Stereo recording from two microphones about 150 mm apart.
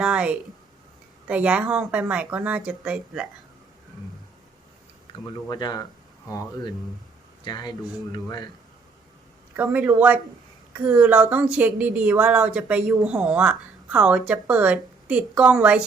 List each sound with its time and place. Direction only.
0.0 s a sound: 5° right (ahead or behind)
1.3 s a woman's voice: 10° right (ahead or behind)
5.2 s speech: 25° left (ahead or behind)
7.4 s speech: 30° left (ahead or behind)
9.6 s a woman's voice: 10° right (ahead or behind)